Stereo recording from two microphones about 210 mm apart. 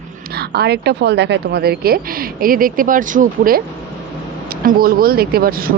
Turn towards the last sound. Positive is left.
turn(degrees=-45)  # may be behind; listen again after turning